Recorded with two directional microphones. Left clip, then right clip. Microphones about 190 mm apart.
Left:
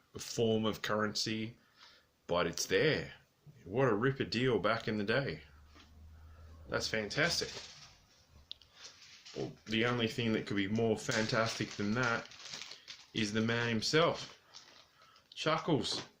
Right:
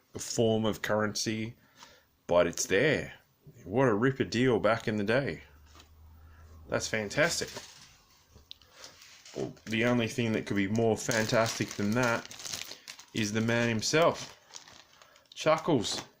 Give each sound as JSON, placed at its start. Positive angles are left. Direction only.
{"t": 0.1, "sound": "speech", "side_deg": -40}
{"t": 6.7, "sound": "speech", "side_deg": -40}
{"t": 8.5, "sound": "a sound", "side_deg": -35}
{"t": 9.6, "sound": "speech", "side_deg": -40}
{"t": 13.1, "sound": "speech", "side_deg": -40}
{"t": 15.3, "sound": "speech", "side_deg": -40}